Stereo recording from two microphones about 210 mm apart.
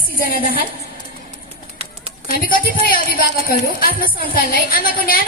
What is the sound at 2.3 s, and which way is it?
A woman's voice, 45° left (ahead or behind).